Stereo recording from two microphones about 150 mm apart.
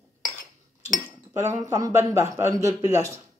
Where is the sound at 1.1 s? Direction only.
20° right (ahead or behind).